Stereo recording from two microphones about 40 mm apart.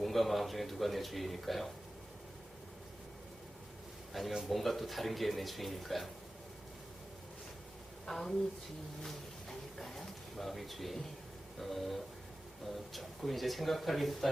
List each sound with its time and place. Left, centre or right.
0.0 s speech: centre
4.1 s speech: centre
8.0 s a woman's voice: centre
9.0 s a sound: centre
11.6 s speech: centre